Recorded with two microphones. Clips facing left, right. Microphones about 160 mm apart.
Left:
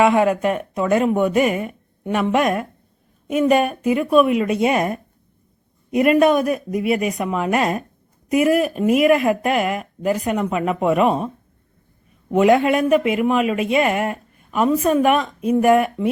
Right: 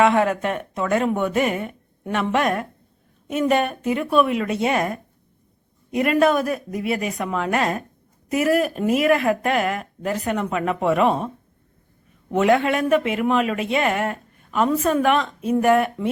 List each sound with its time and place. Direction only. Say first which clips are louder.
0.0 s speech: left 2 dB; 10° left (ahead or behind)
11.0 s speech: left 1 dB; 5° left (ahead or behind)
12.3 s speech: left 3 dB; 15° left (ahead or behind)